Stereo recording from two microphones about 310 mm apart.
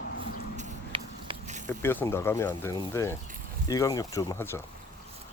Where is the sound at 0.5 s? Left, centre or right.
Centre.